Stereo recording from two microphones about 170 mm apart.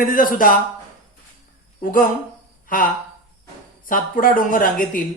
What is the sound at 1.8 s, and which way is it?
Speech, 55° left (ahead or behind).